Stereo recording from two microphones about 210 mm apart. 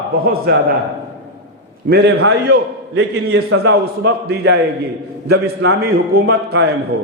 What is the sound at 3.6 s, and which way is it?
A man's voice, 50° right (ahead or behind).